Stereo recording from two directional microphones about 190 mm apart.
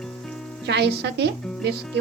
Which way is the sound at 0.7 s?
60° right (ahead or behind).